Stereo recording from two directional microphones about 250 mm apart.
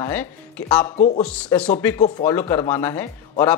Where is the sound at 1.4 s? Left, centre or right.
Centre.